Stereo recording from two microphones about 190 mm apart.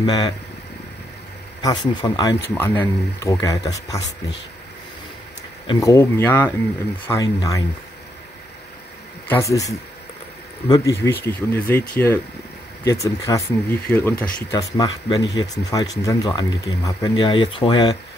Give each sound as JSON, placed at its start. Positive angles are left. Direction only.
{"t": 0.0, "sound": "speech", "side_deg": 20}
{"t": 1.6, "sound": "speech", "side_deg": 20}
{"t": 2.5, "sound": "speech", "side_deg": 10}
{"t": 5.7, "sound": "speech", "side_deg": 15}
{"t": 9.3, "sound": "speech", "side_deg": 15}